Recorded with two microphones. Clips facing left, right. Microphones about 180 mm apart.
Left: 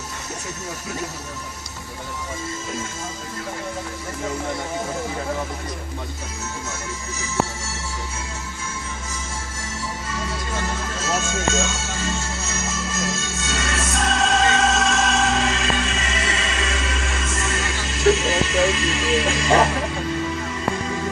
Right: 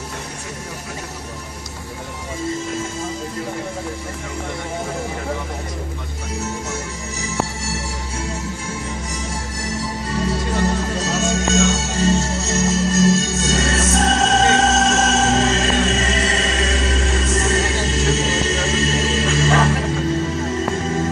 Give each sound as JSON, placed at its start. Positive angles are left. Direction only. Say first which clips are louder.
{"t": 10.2, "sound": "music", "louder": "right 8 dB", "side_deg": -40}
{"t": 11.1, "sound": "speech", "louder": "right 1 dB", "side_deg": -40}
{"t": 11.7, "sound": "music", "louder": "right 9 dB", "side_deg": -40}
{"t": 19.2, "sound": "music", "louder": "even", "side_deg": 20}
{"t": 20.3, "sound": "music", "louder": "right 4 dB", "side_deg": -40}